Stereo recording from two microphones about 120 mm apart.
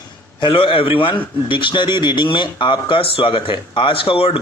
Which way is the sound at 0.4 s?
45° left (ahead or behind).